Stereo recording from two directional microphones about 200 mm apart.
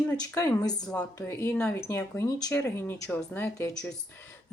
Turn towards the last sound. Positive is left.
turn(degrees=10)  # may be behind; listen again after turning